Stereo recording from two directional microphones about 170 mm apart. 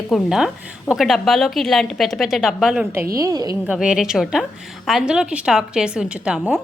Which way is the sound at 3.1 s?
20° right (ahead or behind).